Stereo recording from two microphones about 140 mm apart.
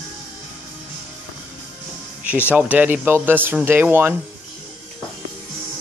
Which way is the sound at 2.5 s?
10° right (ahead or behind).